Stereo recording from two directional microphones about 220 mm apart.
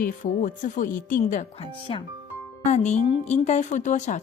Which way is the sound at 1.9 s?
25° left (ahead or behind).